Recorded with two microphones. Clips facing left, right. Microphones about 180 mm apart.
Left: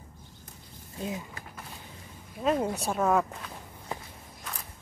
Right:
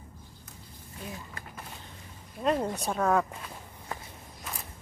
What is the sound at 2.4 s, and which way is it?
Speech, 5° left (ahead or behind).